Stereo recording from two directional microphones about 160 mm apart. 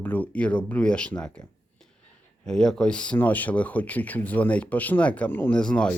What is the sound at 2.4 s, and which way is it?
Speech, 5° left (ahead or behind).